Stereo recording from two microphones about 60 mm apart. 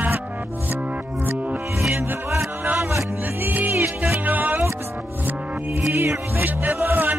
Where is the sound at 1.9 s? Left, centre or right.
Right.